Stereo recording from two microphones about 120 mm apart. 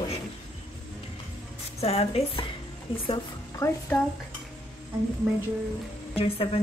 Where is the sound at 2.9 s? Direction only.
45° left (ahead or behind).